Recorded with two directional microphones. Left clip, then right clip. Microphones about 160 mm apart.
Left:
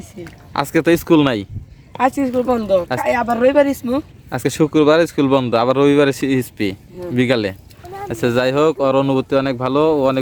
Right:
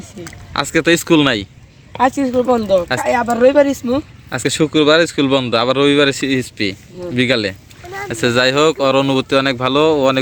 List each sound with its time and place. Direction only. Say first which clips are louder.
0.5 s speech: right 1 dB; 20° left (ahead or behind)
2.0 s speech: right 2 dB; 5° right (ahead or behind)
4.3 s speech: right 1 dB; 20° left (ahead or behind)